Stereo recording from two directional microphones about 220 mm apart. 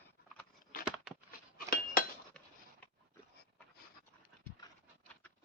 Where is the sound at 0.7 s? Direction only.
40° left (ahead or behind).